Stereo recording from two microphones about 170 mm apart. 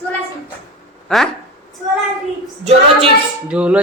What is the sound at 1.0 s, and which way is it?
Speech, 5° left (ahead or behind).